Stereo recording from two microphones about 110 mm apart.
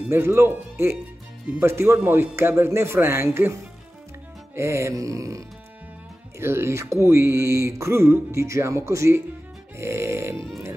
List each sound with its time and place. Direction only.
0.1 s speech: 25° right (ahead or behind)
4.6 s speech: 25° right (ahead or behind)
6.4 s speech: 25° right (ahead or behind)
10.3 s music: 5° left (ahead or behind)